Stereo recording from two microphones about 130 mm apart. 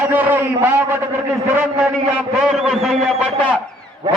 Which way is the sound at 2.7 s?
Centre (ahead or behind).